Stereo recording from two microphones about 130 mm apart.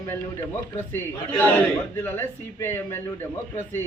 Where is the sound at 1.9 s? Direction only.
15° left (ahead or behind).